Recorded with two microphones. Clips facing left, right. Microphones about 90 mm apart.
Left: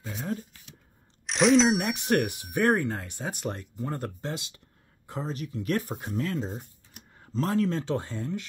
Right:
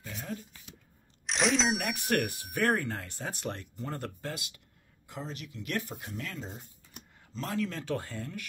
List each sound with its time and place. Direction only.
0.0 s speech: 35° left (ahead or behind)
1.2 s a sound: centre (ahead or behind)
2.0 s speech: 20° left (ahead or behind)
5.0 s speech: 40° left (ahead or behind); by 8.5 s 25° left (ahead or behind)